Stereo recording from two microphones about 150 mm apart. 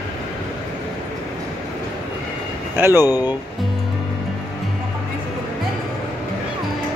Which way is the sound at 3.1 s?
25° left (ahead or behind).